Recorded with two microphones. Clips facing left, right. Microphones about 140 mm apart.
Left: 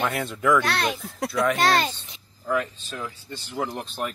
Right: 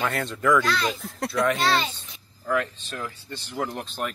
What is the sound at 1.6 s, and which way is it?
Speech, 50° left (ahead or behind).